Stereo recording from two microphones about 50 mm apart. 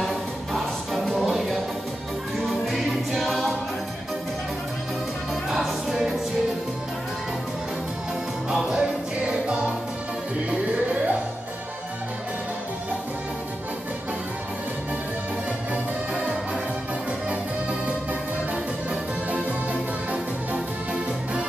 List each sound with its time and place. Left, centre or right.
0.0 s music: centre
5.5 s music: centre
8.5 s music: centre
10.5 s music: right
20.1 s music: centre